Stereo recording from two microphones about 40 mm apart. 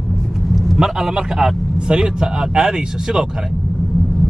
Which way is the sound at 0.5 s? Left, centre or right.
Centre.